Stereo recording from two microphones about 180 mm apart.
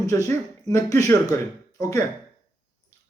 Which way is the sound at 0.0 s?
20° left (ahead or behind).